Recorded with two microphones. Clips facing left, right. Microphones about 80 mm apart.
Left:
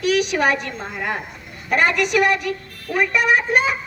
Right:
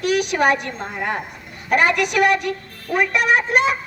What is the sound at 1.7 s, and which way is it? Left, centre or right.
A child's voice, right.